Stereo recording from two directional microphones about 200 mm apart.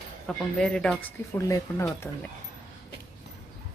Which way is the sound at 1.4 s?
15° left (ahead or behind).